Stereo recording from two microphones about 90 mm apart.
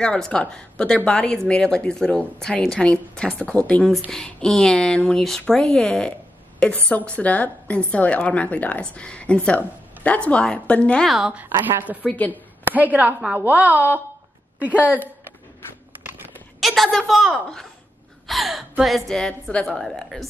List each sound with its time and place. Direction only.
0.0 s a woman's voice: 10° left (ahead or behind)
11.1 s a woman's voice: centre (ahead or behind)
11.7 s speech: 20° right (ahead or behind)
12.0 s a woman's voice: 15° left (ahead or behind)
12.3 s a woman's voice: 20° right (ahead or behind)
16.5 s a woman's voice: centre (ahead or behind)